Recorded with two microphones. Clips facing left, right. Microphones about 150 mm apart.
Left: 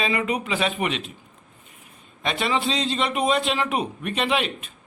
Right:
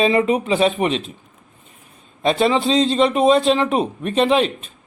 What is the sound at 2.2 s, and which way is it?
Speech, 30° right (ahead or behind).